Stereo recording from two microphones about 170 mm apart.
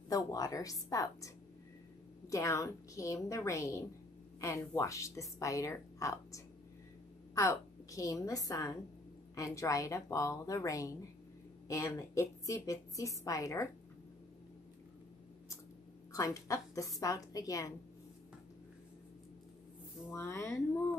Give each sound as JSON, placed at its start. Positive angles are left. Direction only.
{"t": 0.1, "sound": "a woman's voice", "side_deg": 20}
{"t": 16.1, "sound": "a woman's voice", "side_deg": 20}
{"t": 20.1, "sound": "a woman's voice", "side_deg": 15}